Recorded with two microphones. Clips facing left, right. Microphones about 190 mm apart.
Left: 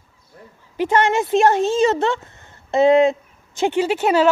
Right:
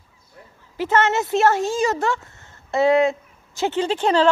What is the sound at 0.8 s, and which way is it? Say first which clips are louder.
A woman's voice: left 2 dB; 15° left (ahead or behind).